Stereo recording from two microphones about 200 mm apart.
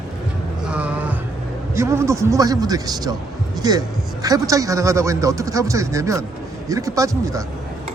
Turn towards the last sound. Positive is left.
turn(degrees=-15)  # may be behind; listen again after turning